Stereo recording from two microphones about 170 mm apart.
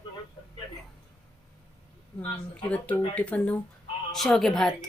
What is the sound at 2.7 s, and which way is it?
A woman's voice, 10° left (ahead or behind).